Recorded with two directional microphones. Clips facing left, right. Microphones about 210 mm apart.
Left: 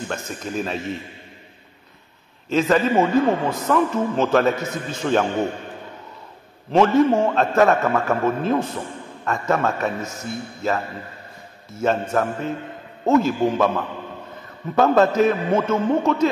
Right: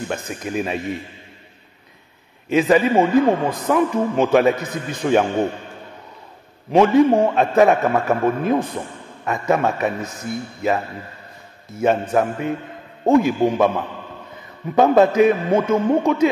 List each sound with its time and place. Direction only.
0.1 s a man's voice: 15° right (ahead or behind)
2.5 s a man's voice: 15° right (ahead or behind)
6.7 s a man's voice: 15° right (ahead or behind)
14.8 s a man's voice: 15° right (ahead or behind)